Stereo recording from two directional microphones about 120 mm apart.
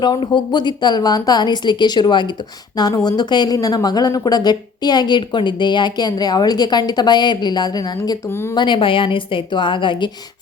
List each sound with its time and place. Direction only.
0.0 s a woman's voice: 40° left (ahead or behind)